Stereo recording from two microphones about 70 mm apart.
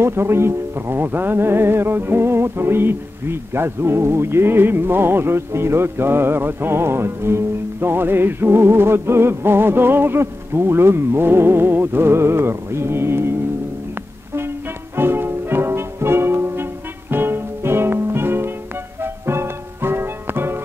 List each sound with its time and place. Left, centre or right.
0.0 s speech: right
15.0 s music: right